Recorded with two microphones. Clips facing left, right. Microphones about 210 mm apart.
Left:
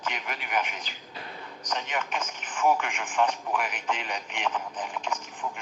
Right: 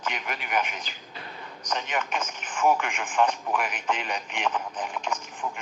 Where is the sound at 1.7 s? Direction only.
50° right (ahead or behind).